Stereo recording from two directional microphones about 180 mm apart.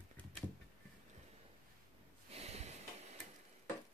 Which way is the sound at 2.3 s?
35° right (ahead or behind).